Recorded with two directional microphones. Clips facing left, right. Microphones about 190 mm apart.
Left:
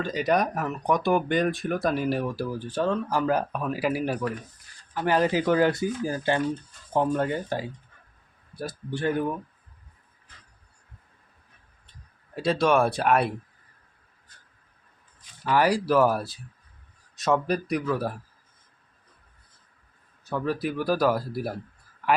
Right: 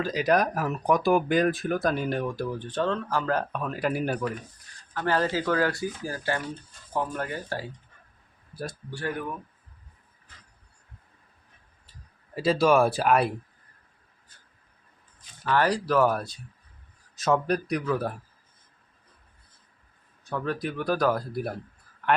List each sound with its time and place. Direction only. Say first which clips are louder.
0.0 s speech: right 1 dB; centre (ahead or behind)
4.9 s speech: left 3 dB; 15° left (ahead or behind)
8.9 s speech: left 7 dB; 20° left (ahead or behind)
12.3 s speech: right 1 dB; centre (ahead or behind)
15.4 s speech: left 2 dB; 10° left (ahead or behind)
20.3 s speech: left 2 dB; 5° left (ahead or behind)